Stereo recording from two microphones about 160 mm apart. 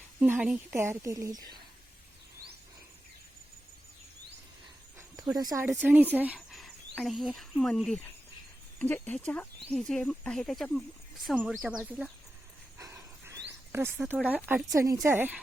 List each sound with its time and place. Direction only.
0.2 s a woman's voice: 5° right (ahead or behind)
4.9 s a sound: 20° right (ahead or behind)
5.8 s a woman's voice: 10° right (ahead or behind)
12.8 s a sound: 20° right (ahead or behind)
13.7 s a woman's voice: 10° right (ahead or behind)
14.7 s speech: 20° right (ahead or behind)